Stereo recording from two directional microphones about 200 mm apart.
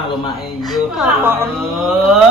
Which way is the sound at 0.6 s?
Centre (ahead or behind).